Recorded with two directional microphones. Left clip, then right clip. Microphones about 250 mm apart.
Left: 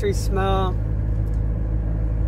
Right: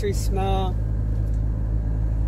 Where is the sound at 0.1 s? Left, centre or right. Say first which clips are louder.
Left 3 dB; left.